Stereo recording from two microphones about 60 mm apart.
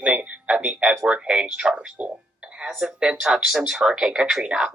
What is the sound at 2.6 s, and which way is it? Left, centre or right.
Speech, centre.